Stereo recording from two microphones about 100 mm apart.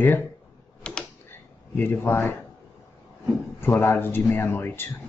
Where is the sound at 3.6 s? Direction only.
20° left (ahead or behind).